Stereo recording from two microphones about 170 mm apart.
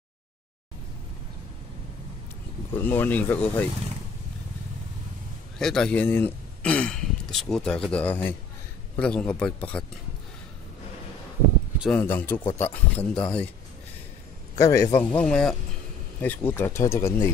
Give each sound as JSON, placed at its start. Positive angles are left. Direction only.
{"t": 2.7, "sound": "speech", "side_deg": 10}
{"t": 5.6, "sound": "speech", "side_deg": 5}
{"t": 11.9, "sound": "speech", "side_deg": 10}
{"t": 14.6, "sound": "speech", "side_deg": 15}
{"t": 15.0, "sound": "speech", "side_deg": 5}